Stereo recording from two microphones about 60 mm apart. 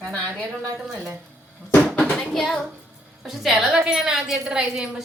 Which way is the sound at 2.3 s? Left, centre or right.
Centre.